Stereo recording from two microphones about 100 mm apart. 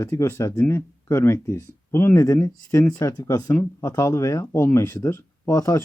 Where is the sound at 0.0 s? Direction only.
25° left (ahead or behind).